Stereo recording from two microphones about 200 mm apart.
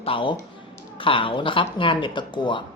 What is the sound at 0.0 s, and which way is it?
Speech, 25° left (ahead or behind).